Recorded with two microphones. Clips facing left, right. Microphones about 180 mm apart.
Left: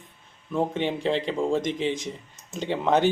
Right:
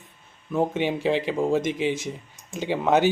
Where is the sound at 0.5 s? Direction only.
5° right (ahead or behind).